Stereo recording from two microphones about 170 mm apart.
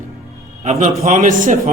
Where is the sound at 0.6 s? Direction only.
40° right (ahead or behind).